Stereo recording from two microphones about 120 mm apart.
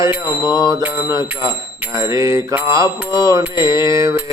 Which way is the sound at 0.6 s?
30° right (ahead or behind).